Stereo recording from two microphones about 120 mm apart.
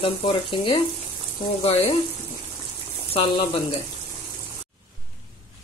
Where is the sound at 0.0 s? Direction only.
45° left (ahead or behind).